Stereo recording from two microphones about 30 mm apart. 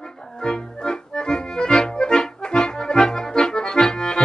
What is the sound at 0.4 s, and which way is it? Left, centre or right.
Accordion, left.